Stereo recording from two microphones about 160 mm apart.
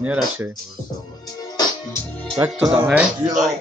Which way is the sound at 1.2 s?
25° left (ahead or behind).